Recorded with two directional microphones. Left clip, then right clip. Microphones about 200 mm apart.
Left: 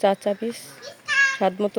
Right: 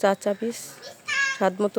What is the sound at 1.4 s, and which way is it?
Speech, centre (ahead or behind).